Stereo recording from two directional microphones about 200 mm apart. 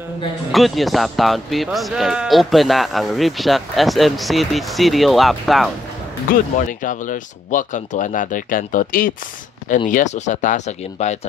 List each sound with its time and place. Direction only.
0.5 s speech: centre (ahead or behind)
6.7 s speech: 40° left (ahead or behind)